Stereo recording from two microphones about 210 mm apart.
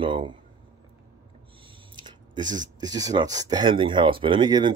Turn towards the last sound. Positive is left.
turn(degrees=-20)  # may be behind; listen again after turning